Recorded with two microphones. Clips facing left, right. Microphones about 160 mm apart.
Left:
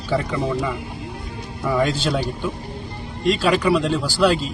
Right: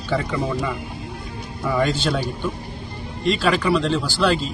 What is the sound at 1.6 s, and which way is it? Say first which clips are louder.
Speech: left 1 dB; centre (ahead or behind).